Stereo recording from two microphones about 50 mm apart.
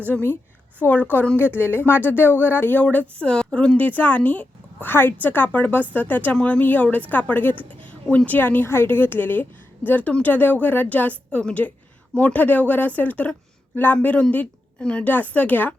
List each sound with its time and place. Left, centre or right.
0.8 s a woman's voice: left
3.1 s a woman's voice: left
3.8 s speech: left
4.9 s speech: left
5.5 s a woman's voice: left
8.4 s a woman's voice: left
14.8 s a woman's voice: centre
15.0 s a woman's voice: left